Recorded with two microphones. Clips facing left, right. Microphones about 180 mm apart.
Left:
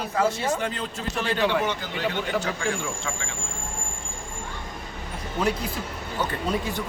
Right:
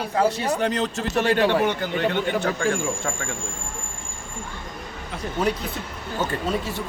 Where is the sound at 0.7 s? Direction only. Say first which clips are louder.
Right 7 dB; 80° right.